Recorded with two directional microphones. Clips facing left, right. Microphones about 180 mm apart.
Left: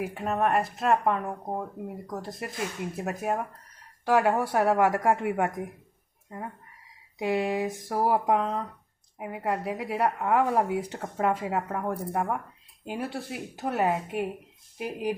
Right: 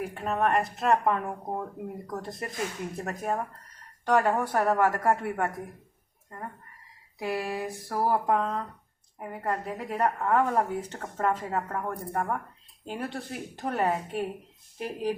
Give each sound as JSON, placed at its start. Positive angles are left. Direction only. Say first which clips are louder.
{"t": 0.0, "sound": "speech", "louder": "left 1 dB", "side_deg": 5}
{"t": 7.2, "sound": "speech", "louder": "left 4 dB", "side_deg": 20}